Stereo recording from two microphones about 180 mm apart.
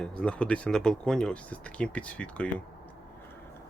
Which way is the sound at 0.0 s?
5° left (ahead or behind).